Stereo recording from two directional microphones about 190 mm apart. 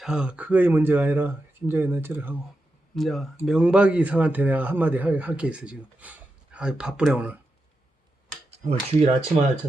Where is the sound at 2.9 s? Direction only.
Centre (ahead or behind).